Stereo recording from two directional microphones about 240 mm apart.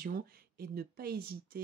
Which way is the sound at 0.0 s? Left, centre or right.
Right.